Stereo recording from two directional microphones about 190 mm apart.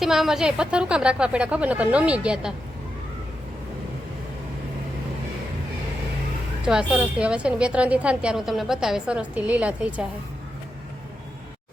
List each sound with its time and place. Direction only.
0.0 s a woman's voice: centre (ahead or behind)
6.7 s a woman's voice: 5° right (ahead or behind)